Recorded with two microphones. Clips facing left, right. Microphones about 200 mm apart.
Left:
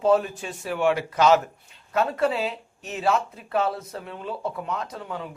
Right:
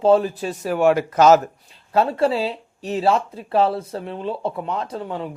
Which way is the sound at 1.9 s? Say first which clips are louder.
Right 4 dB; 30° right (ahead or behind).